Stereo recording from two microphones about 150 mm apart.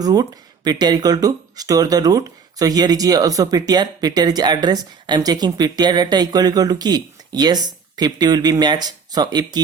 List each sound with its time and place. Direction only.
0.0 s speech: 25° right (ahead or behind)